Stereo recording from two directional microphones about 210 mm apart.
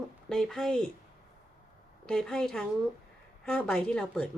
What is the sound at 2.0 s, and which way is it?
Speech, 5° left (ahead or behind).